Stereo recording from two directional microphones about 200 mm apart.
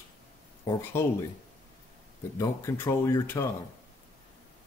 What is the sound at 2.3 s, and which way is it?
Speech, 15° left (ahead or behind).